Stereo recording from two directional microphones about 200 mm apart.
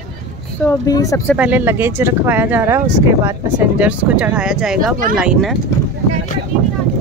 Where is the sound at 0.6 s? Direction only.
15° left (ahead or behind).